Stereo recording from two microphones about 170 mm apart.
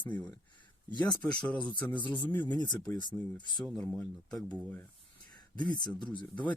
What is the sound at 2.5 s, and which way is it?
Speech, 25° left (ahead or behind).